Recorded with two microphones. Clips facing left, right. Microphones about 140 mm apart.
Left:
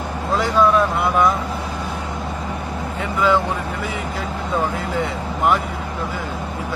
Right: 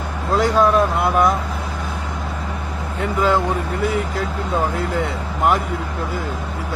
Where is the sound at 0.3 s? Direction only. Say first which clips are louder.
Right 1 dB; 40° right (ahead or behind).